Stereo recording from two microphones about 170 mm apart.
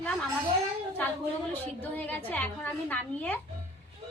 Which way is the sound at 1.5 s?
10° left (ahead or behind).